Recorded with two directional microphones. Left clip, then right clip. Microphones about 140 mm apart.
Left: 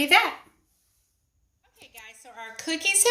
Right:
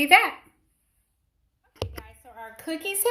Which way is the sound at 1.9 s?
30° right (ahead or behind).